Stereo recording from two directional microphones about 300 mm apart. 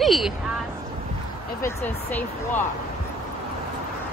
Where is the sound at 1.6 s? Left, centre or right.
Centre.